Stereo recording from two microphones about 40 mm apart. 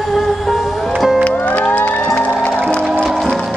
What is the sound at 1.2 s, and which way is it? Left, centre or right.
Music, left.